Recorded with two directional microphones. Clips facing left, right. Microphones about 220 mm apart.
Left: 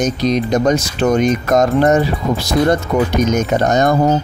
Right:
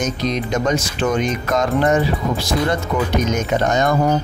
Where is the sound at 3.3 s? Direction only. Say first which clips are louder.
Left 4 dB; 40° left (ahead or behind).